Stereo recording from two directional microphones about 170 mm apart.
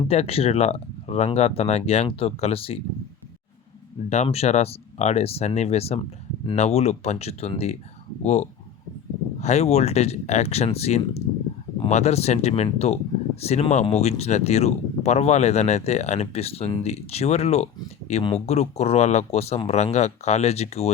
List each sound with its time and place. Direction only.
0.0 s speech: 35° left (ahead or behind)
4.1 s speech: 40° left (ahead or behind)